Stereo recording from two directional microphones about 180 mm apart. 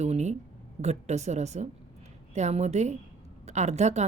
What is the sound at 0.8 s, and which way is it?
Speech, 40° right (ahead or behind).